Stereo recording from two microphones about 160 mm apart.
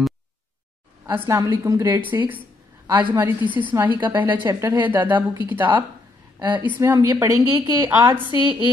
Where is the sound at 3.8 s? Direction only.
30° right (ahead or behind).